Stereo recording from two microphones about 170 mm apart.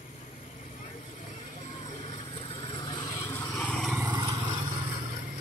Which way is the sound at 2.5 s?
30° left (ahead or behind).